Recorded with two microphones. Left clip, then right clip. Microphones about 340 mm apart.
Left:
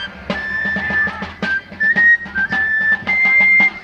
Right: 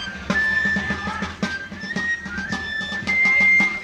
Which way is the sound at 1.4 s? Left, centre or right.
Left.